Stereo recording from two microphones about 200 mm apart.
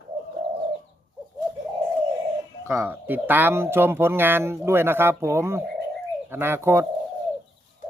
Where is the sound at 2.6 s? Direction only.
10° right (ahead or behind).